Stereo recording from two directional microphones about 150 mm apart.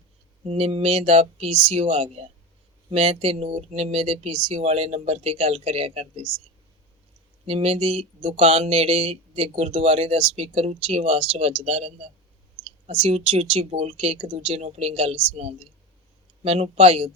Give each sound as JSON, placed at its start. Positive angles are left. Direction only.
{"t": 0.4, "sound": "speech", "side_deg": -40}
{"t": 7.4, "sound": "speech", "side_deg": -40}
{"t": 12.6, "sound": "clicking", "side_deg": -10}
{"t": 12.9, "sound": "speech", "side_deg": -40}